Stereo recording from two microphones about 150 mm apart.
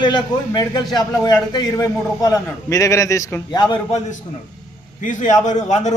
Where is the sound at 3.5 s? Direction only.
30° left (ahead or behind).